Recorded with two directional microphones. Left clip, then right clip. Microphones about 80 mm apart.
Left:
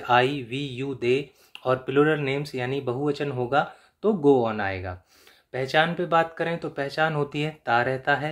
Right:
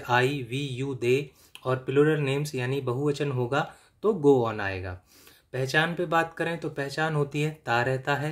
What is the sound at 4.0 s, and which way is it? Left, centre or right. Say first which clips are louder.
Speech: left 1 dB; right.